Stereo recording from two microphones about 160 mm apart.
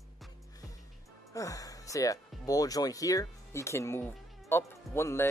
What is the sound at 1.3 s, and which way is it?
Speech, 20° left (ahead or behind).